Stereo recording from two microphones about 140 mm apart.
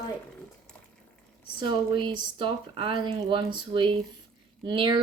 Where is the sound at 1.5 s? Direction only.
35° right (ahead or behind).